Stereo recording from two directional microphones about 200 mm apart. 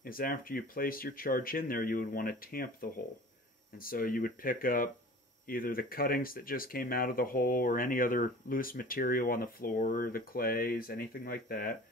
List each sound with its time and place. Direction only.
0.0 s speech: 45° left (ahead or behind)